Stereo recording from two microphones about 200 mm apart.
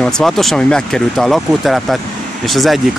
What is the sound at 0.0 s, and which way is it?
Speech, centre (ahead or behind).